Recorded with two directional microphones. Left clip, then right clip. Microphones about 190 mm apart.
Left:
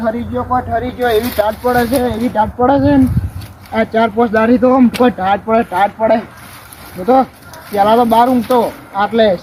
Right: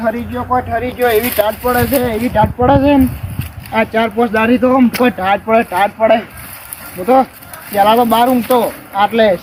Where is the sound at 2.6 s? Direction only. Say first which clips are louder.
Right 1 dB; 25° left (ahead or behind).